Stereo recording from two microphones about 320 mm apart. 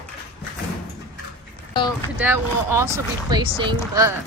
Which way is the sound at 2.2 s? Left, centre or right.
Centre.